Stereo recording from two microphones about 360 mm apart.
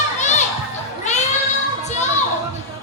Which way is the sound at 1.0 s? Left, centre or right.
Centre.